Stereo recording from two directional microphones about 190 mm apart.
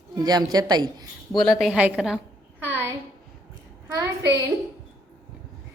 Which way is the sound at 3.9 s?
20° right (ahead or behind).